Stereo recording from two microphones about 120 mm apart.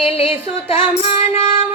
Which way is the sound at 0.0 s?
55° left (ahead or behind).